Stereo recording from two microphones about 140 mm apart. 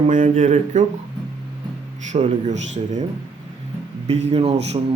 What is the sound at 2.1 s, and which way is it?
Speech, 50° right (ahead or behind).